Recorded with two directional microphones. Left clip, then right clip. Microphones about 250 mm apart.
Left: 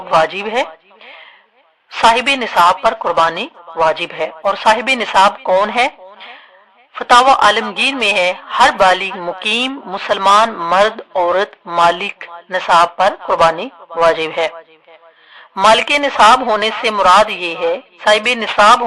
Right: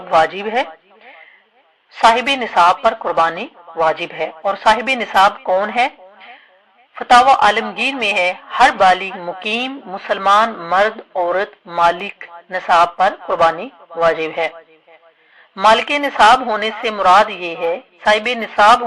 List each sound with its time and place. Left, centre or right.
0.2 s speech: centre
1.9 s speech: centre
15.7 s speech: left